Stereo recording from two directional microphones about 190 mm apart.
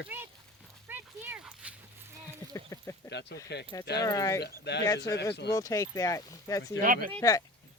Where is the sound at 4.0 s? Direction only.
20° left (ahead or behind).